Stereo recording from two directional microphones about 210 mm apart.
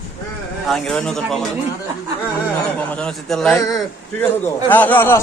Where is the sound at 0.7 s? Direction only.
5° left (ahead or behind).